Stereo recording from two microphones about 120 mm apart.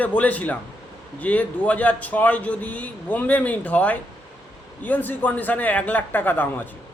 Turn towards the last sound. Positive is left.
turn(degrees=15)  # may be behind; listen again after turning